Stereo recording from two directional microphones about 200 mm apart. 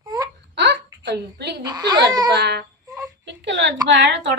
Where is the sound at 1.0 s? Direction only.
60° right (ahead or behind).